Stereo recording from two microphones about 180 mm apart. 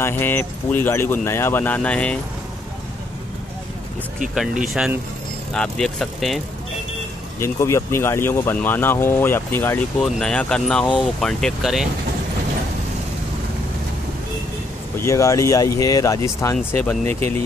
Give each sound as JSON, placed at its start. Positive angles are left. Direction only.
{"t": 0.0, "sound": "speech", "side_deg": 10}
{"t": 4.8, "sound": "speech", "side_deg": -5}
{"t": 7.3, "sound": "speech", "side_deg": 15}
{"t": 15.0, "sound": "speech", "side_deg": 15}